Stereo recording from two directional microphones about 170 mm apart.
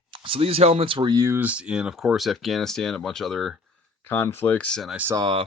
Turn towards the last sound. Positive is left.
turn(degrees=-30)  # may be behind; listen again after turning